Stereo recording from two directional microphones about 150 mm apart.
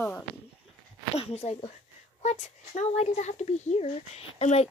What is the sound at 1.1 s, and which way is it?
Speech, 45° left (ahead or behind).